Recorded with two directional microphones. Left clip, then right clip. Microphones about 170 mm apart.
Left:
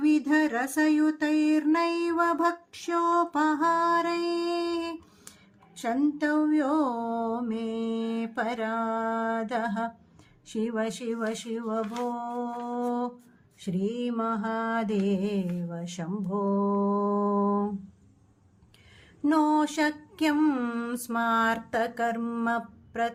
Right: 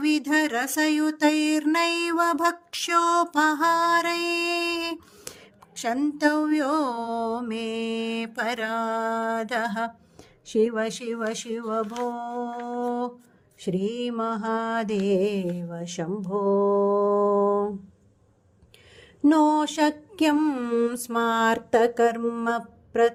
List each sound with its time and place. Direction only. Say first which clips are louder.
0.0 s music: right 1 dB; 50° right (ahead or behind)
10.4 s mantra: right 7 dB; 35° right (ahead or behind)
19.2 s a sound: right 4 dB; 30° right (ahead or behind)